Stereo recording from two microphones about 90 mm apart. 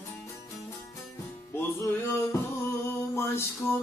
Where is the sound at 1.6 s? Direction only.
25° left (ahead or behind).